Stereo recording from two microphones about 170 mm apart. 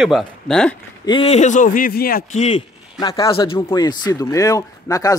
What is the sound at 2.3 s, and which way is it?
Speech, 40° left (ahead or behind).